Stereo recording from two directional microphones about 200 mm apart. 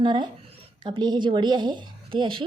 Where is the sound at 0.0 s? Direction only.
20° right (ahead or behind).